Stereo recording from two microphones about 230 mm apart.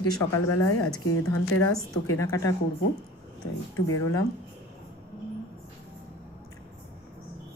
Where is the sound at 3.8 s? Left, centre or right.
Left.